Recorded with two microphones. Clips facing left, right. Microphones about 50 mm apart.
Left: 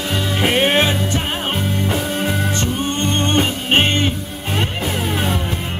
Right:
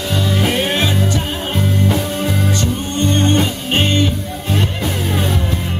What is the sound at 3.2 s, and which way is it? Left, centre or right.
Music, left.